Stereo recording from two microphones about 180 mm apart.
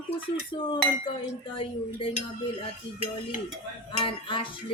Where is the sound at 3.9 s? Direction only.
30° left (ahead or behind).